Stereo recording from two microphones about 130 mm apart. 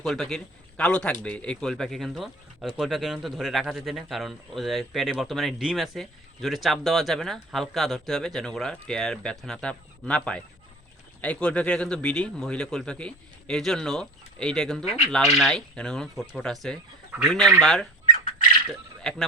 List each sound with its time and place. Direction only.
0.0 s a man's voice: centre (ahead or behind)
18.0 s a sound: 75° left (ahead or behind)
19.1 s a man's voice: 5° left (ahead or behind)